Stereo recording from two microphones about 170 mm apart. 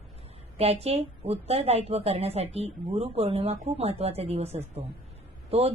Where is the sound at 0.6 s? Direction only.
35° right (ahead or behind).